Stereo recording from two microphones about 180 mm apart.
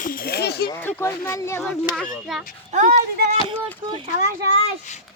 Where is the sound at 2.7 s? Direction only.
45° right (ahead or behind).